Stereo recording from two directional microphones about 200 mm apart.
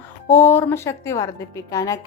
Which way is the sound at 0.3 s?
10° left (ahead or behind).